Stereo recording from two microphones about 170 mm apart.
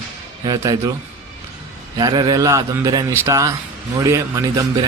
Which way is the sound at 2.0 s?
25° right (ahead or behind).